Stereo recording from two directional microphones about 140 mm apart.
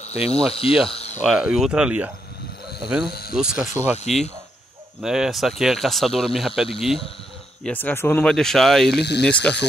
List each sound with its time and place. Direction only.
0.0 s speech: 50° left (ahead or behind)
0.8 s a sound: 45° left (ahead or behind)
1.2 s speech: 5° right (ahead or behind)
3.3 s speech: 5° right (ahead or behind)
4.0 s speech: 50° left (ahead or behind)
5.0 s speech: 5° right (ahead or behind)
7.6 s speech: 10° left (ahead or behind)